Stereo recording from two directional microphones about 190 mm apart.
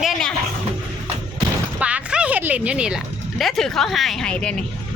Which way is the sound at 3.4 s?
Centre (ahead or behind).